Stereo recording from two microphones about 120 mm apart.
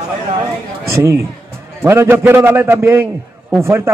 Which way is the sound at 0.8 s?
25° right (ahead or behind).